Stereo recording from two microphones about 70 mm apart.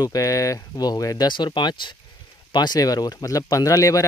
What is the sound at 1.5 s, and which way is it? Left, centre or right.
Speech, left.